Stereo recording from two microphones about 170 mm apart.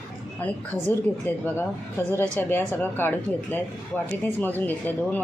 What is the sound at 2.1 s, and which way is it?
Speech, 15° right (ahead or behind).